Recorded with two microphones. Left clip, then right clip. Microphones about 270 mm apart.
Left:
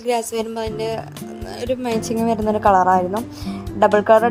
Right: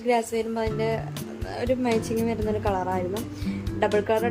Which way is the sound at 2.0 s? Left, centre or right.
Left.